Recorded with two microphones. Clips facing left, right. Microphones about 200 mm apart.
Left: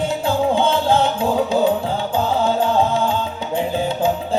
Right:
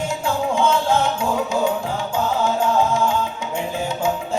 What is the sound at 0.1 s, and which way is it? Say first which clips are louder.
Music: left 4 dB; 35° left (ahead or behind).